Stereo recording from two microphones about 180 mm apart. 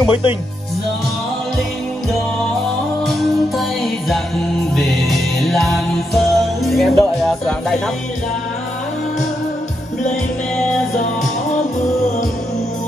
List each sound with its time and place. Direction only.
0.0 s speech: 30° left (ahead or behind)
3.5 s music: centre (ahead or behind)